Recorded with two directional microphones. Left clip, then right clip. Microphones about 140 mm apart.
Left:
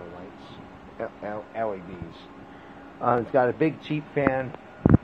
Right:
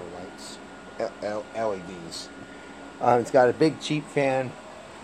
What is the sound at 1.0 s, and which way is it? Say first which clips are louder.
Speech: right 3 dB; 30° right (ahead or behind).